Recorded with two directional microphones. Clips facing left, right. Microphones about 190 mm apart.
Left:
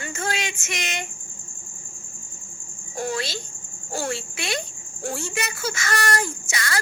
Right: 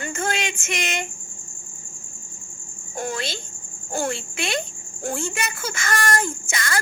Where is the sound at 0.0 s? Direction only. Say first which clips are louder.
Right 3 dB; 50° right (ahead or behind).